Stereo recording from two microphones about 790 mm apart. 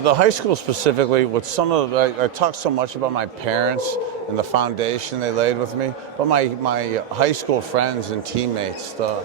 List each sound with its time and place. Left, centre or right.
0.0 s a man's voice: right